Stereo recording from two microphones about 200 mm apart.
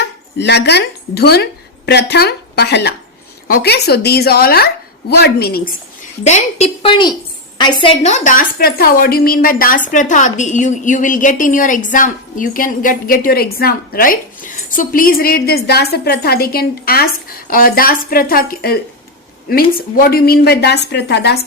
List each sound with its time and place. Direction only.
0.0 s a woman's voice: 60° left (ahead or behind)
6.2 s a woman's voice: 35° left (ahead or behind); by 21.3 s 60° left (ahead or behind)